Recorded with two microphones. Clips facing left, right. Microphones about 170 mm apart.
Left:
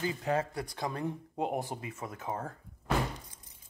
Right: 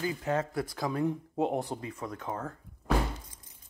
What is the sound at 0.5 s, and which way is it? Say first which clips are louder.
Speech: right 4 dB; centre (ahead or behind).